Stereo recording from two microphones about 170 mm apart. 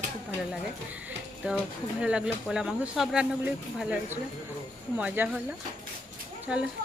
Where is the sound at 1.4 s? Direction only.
10° right (ahead or behind).